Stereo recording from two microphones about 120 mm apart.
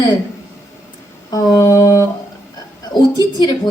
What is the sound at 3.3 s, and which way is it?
Speech, 40° left (ahead or behind).